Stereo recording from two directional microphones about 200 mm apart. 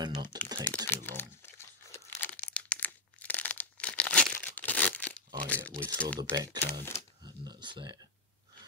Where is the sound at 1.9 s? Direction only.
10° left (ahead or behind).